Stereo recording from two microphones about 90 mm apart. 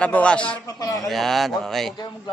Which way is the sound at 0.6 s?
40° left (ahead or behind).